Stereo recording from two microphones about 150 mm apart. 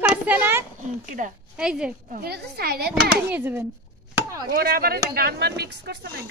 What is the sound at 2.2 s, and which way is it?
Speech, 90° right.